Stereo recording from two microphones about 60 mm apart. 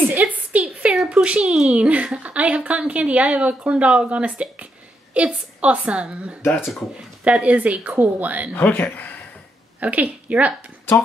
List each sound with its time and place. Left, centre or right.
0.1 s a woman's voice: right
8.5 s speech: left
9.8 s a woman's voice: right